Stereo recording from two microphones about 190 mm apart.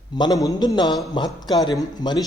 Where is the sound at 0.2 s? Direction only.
20° left (ahead or behind).